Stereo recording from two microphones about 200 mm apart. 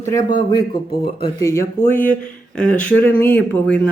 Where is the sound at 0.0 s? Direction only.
15° left (ahead or behind).